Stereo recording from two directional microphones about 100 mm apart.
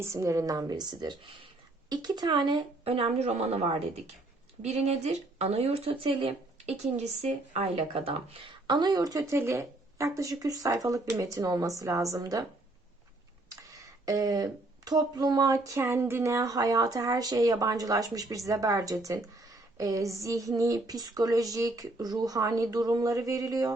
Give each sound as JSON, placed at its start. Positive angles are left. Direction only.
{"t": 0.0, "sound": "speech", "side_deg": -30}
{"t": 2.8, "sound": "speech", "side_deg": -75}
{"t": 7.2, "sound": "speech", "side_deg": -85}
{"t": 8.6, "sound": "speech", "side_deg": -50}
{"t": 13.7, "sound": "speech", "side_deg": -35}